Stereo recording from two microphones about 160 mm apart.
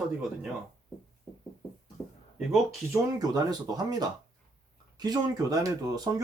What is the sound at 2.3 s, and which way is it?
Speech, centre (ahead or behind).